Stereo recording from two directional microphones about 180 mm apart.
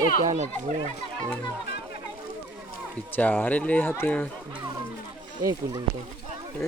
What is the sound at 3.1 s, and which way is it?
Speech, 10° left (ahead or behind).